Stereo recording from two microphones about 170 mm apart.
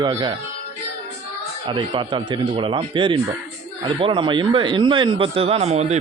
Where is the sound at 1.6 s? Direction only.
30° right (ahead or behind).